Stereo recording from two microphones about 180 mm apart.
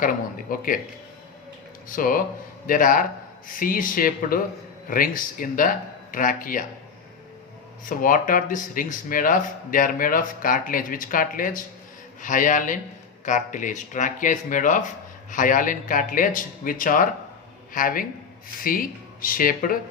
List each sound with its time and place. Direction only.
0.5 s speech: 50° left (ahead or behind)
2.0 s speech: 50° left (ahead or behind)
7.9 s speech: 50° left (ahead or behind)